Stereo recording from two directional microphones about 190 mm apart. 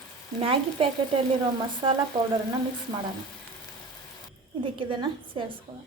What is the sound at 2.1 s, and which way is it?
Speech, 20° right (ahead or behind).